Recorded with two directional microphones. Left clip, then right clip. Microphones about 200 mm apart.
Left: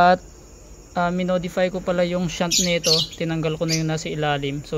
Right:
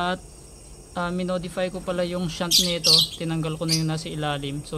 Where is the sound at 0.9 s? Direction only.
15° left (ahead or behind).